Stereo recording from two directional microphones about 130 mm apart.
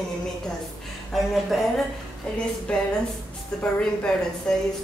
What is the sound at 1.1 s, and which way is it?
Music, centre (ahead or behind).